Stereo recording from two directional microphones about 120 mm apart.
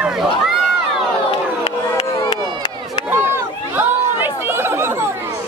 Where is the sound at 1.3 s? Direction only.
45° left (ahead or behind).